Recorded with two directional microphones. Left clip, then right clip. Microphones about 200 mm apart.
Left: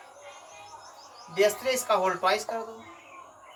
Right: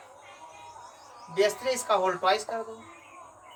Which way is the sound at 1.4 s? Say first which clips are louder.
Left 1 dB; 15° right (ahead or behind).